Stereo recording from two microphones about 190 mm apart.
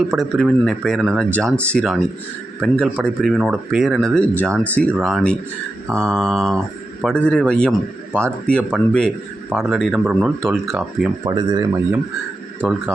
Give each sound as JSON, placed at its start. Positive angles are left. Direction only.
{"t": 0.2, "sound": "speech", "side_deg": 0}
{"t": 11.3, "sound": "speech", "side_deg": -20}
{"t": 12.6, "sound": "speech", "side_deg": 0}